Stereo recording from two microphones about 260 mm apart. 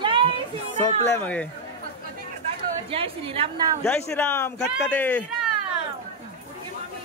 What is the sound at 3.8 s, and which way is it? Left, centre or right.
Speech, centre.